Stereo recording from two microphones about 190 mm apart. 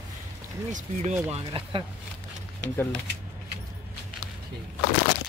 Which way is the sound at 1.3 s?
30° right (ahead or behind).